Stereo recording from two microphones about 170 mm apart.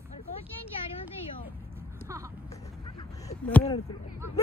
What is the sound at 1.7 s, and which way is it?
Vehicle, 15° right (ahead or behind).